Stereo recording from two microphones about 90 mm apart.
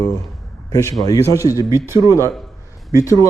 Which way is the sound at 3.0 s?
40° left (ahead or behind).